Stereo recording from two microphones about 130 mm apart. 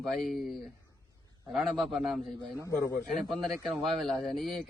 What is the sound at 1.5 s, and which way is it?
Speech, centre (ahead or behind).